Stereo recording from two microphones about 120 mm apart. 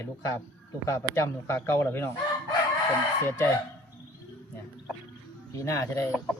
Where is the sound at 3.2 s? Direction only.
20° left (ahead or behind).